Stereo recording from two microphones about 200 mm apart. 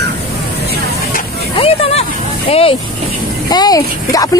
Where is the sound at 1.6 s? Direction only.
30° left (ahead or behind).